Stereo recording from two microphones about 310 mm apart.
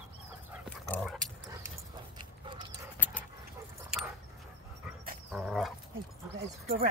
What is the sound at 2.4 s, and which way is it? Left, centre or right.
Dog, centre.